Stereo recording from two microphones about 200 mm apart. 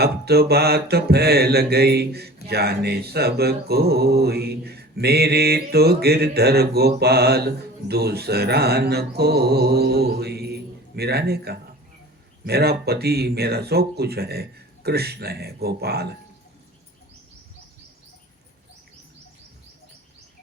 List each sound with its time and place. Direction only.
0.0 s mantra: 55° right (ahead or behind)